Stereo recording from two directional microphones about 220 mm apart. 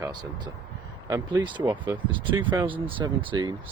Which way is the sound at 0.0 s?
20° right (ahead or behind).